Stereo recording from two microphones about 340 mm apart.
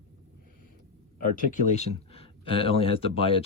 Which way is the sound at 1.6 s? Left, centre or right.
Centre.